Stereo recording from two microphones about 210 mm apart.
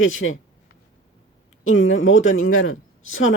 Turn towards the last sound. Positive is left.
turn(degrees=70)  # may be behind; listen again after turning